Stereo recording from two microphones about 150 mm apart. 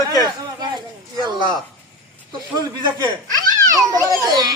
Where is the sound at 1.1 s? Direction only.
30° right (ahead or behind).